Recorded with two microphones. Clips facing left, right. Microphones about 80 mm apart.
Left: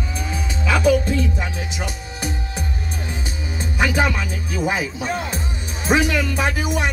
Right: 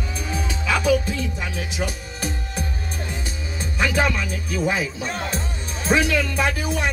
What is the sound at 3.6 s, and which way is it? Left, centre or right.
Speech, centre.